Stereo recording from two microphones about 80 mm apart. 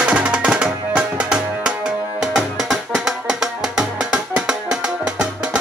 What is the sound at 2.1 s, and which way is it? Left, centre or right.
Music, centre.